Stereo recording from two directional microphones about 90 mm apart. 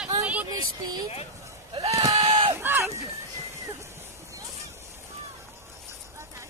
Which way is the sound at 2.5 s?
25° right (ahead or behind).